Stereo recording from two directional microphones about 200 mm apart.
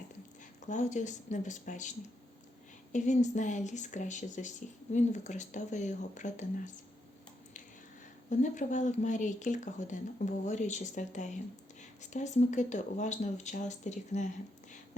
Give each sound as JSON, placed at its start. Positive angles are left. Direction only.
{"t": 0.7, "sound": "speech", "side_deg": 35}
{"t": 8.3, "sound": "speech", "side_deg": 35}